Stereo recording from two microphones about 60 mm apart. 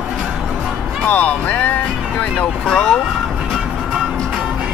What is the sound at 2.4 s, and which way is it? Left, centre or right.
Vehicle, centre.